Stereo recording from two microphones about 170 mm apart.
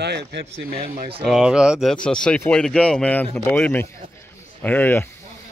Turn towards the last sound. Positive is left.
turn(degrees=10)  # may be behind; listen again after turning